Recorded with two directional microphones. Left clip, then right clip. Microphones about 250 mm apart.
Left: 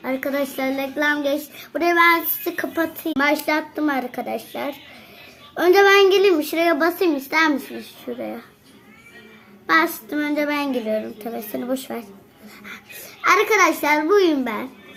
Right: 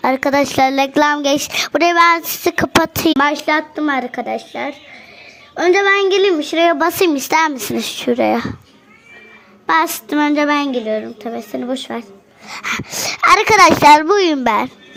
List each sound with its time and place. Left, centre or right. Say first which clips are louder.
0.0 s a child's voice: right 9 dB; right
9.6 s a child's voice: right 3 dB; right
12.5 s speech: right 16 dB; right